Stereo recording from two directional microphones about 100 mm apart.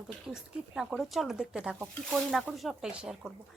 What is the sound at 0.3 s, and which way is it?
A woman's voice, 10° right (ahead or behind).